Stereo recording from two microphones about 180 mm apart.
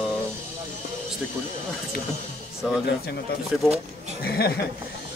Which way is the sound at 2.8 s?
65° left (ahead or behind).